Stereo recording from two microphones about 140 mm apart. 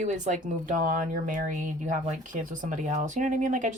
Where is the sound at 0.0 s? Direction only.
60° right (ahead or behind).